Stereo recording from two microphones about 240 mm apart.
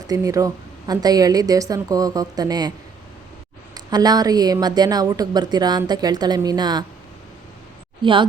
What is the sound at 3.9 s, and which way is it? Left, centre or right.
Speech, centre.